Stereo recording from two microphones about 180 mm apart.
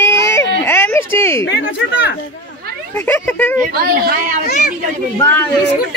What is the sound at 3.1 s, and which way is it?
Speech, 10° left (ahead or behind).